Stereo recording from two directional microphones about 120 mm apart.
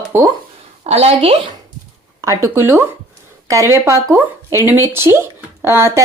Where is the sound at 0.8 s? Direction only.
55° right (ahead or behind).